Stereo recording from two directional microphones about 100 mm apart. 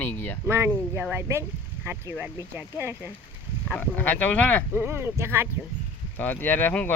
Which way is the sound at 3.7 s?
15° left (ahead or behind).